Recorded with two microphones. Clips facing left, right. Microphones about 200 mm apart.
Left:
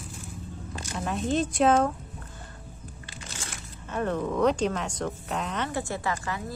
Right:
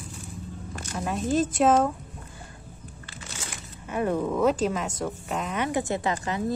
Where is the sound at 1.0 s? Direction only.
Centre (ahead or behind).